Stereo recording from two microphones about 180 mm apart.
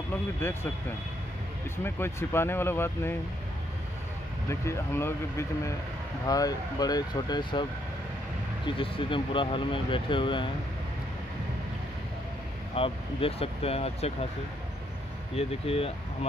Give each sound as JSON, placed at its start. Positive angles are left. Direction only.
{"t": 0.4, "sound": "speech", "side_deg": 10}
{"t": 1.8, "sound": "speech", "side_deg": 15}
{"t": 4.5, "sound": "speech", "side_deg": 15}
{"t": 8.6, "sound": "speech", "side_deg": 30}
{"t": 12.7, "sound": "speech", "side_deg": 30}
{"t": 15.3, "sound": "speech", "side_deg": 30}